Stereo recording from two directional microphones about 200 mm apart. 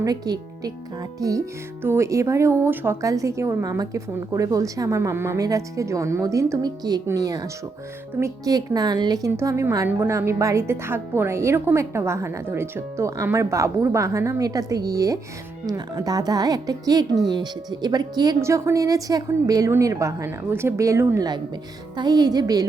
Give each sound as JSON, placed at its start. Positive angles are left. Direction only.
{"t": 0.0, "sound": "a woman's voice", "side_deg": -20}